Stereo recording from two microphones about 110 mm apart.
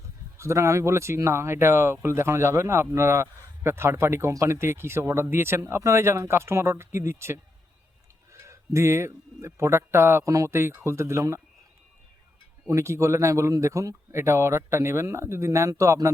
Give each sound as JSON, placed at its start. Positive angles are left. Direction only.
{"t": 0.3, "sound": "speech", "side_deg": -25}
{"t": 12.6, "sound": "speech", "side_deg": -25}